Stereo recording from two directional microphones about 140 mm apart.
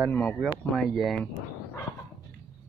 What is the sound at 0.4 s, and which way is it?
Speech, centre (ahead or behind).